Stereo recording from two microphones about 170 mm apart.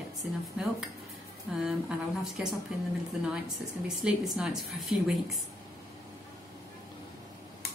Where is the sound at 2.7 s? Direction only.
5° right (ahead or behind).